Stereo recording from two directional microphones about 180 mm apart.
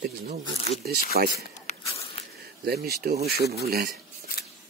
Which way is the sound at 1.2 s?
55° right (ahead or behind).